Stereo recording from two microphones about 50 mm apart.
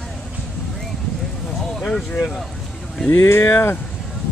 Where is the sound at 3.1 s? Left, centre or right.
Left.